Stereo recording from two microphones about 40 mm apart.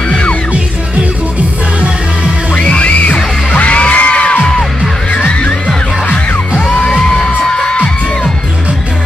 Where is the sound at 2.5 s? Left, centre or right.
Left.